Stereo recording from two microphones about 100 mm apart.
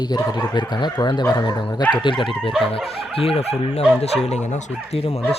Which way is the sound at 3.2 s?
75° left (ahead or behind).